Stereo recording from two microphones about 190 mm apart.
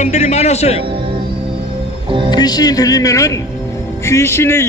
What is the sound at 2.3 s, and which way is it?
A man's voice, 20° left (ahead or behind).